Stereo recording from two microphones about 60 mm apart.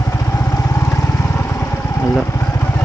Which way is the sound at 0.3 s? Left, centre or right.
Left.